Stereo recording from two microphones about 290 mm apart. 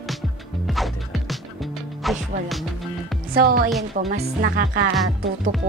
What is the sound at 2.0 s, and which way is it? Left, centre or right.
Music, centre.